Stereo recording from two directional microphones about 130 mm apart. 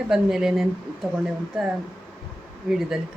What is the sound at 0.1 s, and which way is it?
Speech, 5° right (ahead or behind).